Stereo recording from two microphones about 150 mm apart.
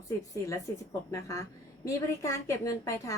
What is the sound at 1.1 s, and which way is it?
A woman's voice, 20° left (ahead or behind).